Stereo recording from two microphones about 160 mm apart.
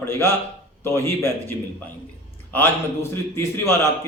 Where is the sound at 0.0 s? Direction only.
15° left (ahead or behind).